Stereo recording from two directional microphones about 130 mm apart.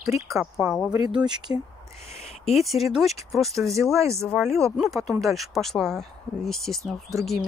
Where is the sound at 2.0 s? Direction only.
55° left (ahead or behind).